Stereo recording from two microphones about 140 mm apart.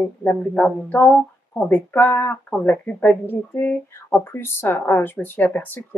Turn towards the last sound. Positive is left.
turn(degrees=15)  # may be behind; listen again after turning